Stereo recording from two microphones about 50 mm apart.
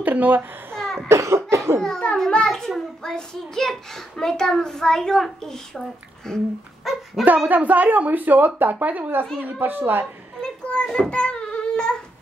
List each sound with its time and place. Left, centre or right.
0.0 s a child's voice: right
0.7 s cough: centre
1.0 s cough: right
1.8 s a child's voice: centre
6.8 s speech: centre
7.4 s speech: right
9.6 s a woman's voice: right
10.7 s child singing: left